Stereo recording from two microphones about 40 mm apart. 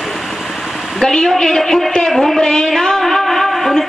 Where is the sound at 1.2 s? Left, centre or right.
Centre.